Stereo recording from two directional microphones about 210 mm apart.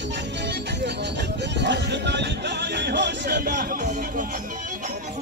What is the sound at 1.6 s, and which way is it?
Music, 55° right (ahead or behind).